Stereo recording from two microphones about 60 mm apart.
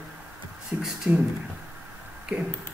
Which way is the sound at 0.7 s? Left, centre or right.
Right.